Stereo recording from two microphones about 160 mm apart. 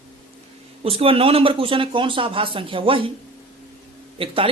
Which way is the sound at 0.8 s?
35° right (ahead or behind).